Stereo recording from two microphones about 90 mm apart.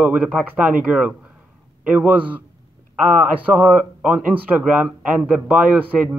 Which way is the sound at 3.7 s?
10° right (ahead or behind).